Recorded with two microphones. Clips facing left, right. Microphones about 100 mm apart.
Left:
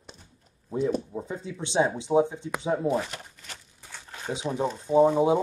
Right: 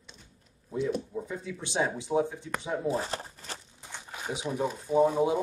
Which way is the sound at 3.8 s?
15° right (ahead or behind).